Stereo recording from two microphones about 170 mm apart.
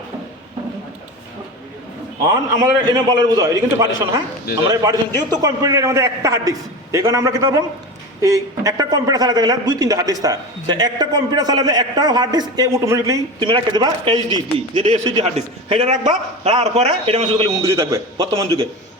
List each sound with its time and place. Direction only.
2.2 s a man's voice: 20° right (ahead or behind)
4.7 s a man's voice: 20° right (ahead or behind); by 17.5 s 35° right (ahead or behind)
17.6 s a man's voice: 15° right (ahead or behind)